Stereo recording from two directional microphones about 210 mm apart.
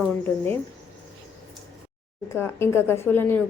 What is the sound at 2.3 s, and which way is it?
A woman's voice, 10° left (ahead or behind).